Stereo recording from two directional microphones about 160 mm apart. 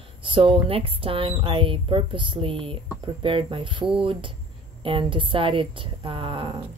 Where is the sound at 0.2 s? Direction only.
35° right (ahead or behind).